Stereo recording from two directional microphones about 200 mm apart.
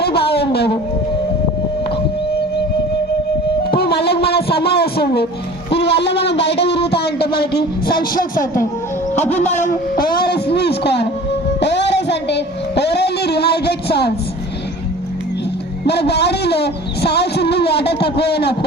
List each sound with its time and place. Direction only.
0.0 s speech: 55° left (ahead or behind)
3.6 s music: 50° left (ahead or behind)
4.8 s speech: 50° left (ahead or behind)
5.7 s a sound: 55° left (ahead or behind)
6.9 s speech: 55° left (ahead or behind)
9.1 s music: 10° left (ahead or behind)
9.4 s a sound: 40° left (ahead or behind); by 14.1 s 55° left (ahead or behind)
15.9 s a sound: 55° left (ahead or behind)
18.2 s speech: 55° left (ahead or behind)